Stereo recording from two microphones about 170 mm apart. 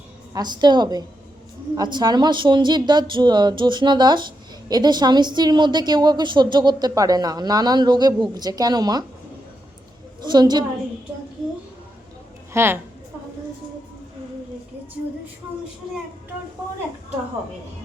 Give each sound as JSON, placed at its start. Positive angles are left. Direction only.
{"t": 0.3, "sound": "a woman's voice", "side_deg": -25}
{"t": 10.2, "sound": "a woman's voice", "side_deg": -25}
{"t": 12.5, "sound": "a woman's voice", "side_deg": -15}